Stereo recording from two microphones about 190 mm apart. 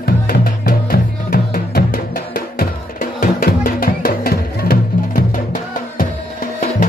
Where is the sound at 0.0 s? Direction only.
50° left (ahead or behind).